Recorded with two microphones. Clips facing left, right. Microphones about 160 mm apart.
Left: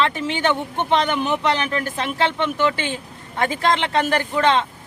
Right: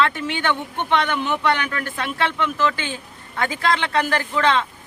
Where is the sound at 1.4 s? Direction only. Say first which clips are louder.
Left 1 dB; 25° left (ahead or behind).